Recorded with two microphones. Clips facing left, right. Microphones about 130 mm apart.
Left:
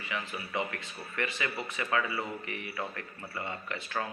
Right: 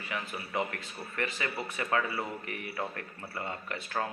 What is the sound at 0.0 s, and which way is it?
A man's voice, 45° right (ahead or behind).